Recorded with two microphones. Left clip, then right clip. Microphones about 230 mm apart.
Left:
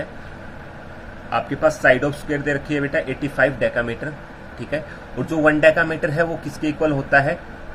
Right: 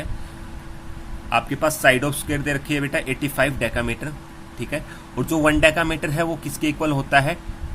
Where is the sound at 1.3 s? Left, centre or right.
Right.